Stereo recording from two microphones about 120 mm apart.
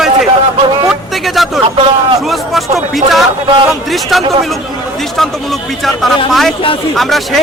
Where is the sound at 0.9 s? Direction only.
Centre (ahead or behind).